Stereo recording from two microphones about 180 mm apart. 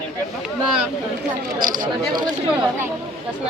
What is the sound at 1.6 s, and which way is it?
Speech, 50° right (ahead or behind).